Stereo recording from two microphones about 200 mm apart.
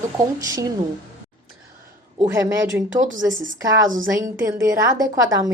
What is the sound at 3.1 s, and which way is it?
Speech, 70° right (ahead or behind).